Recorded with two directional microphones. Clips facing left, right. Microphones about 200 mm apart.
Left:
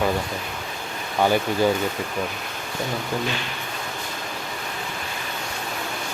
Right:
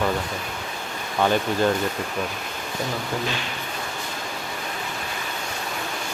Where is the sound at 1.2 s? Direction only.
10° left (ahead or behind).